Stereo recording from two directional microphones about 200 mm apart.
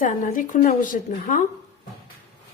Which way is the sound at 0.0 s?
40° left (ahead or behind).